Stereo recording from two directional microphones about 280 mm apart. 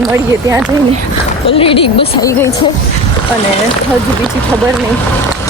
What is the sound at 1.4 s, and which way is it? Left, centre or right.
A woman's voice, centre.